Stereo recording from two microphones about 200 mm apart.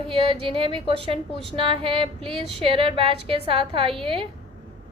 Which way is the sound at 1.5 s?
25° right (ahead or behind).